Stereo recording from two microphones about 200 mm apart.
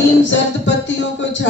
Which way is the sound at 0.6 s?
65° left (ahead or behind).